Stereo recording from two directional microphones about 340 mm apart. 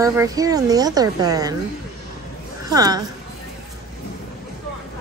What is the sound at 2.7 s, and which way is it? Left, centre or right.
Speech, centre.